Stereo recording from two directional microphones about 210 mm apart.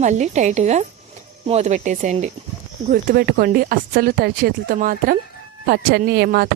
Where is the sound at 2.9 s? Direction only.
45° right (ahead or behind).